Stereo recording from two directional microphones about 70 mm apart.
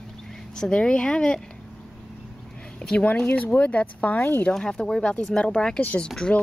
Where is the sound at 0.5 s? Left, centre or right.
Centre.